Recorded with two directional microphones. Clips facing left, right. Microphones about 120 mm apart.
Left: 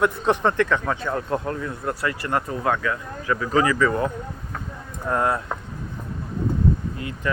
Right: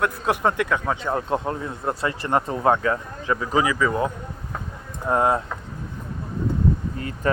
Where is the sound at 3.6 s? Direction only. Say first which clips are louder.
Left 1 dB; 10° right (ahead or behind).